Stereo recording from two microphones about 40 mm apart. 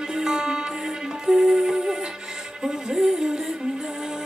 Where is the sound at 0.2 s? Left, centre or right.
Centre.